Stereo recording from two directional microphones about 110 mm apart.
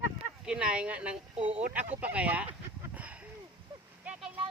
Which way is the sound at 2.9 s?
10° right (ahead or behind).